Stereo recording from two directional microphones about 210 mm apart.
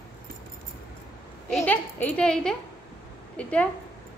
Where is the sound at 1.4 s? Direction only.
5° left (ahead or behind).